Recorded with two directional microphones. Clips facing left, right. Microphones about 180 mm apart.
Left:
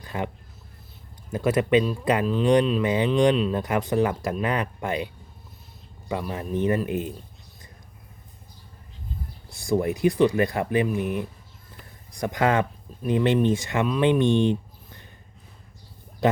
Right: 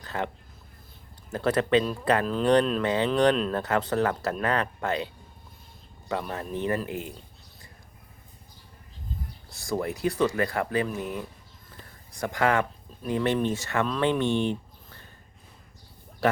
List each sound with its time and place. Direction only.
0.0 s a sound: 15° left (ahead or behind)
1.3 s speech: 10° left (ahead or behind)
9.5 s speech: 15° left (ahead or behind)